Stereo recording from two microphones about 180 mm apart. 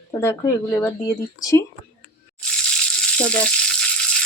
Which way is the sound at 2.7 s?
5° left (ahead or behind).